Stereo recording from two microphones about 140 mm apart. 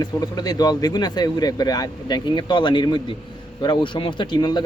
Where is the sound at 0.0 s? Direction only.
30° left (ahead or behind).